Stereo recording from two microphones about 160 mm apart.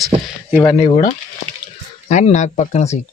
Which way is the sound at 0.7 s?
40° left (ahead or behind).